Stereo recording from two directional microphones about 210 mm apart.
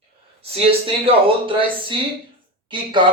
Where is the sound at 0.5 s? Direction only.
25° right (ahead or behind).